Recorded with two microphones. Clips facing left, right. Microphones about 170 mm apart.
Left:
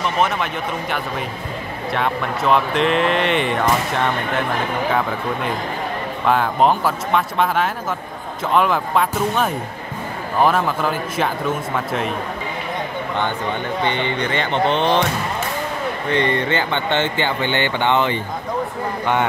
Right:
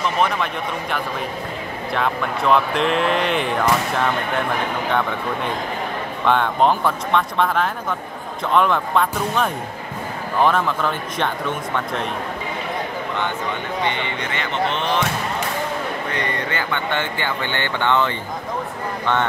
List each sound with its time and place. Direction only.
0.0 s speech: centre (ahead or behind)
6.2 s speech: 5° left (ahead or behind)
13.8 s speech: 30° left (ahead or behind)
16.1 s speech: 25° left (ahead or behind)